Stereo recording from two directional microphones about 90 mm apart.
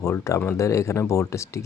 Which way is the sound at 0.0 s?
30° left (ahead or behind).